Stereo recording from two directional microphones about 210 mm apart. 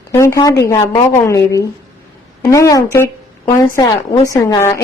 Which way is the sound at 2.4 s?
15° left (ahead or behind).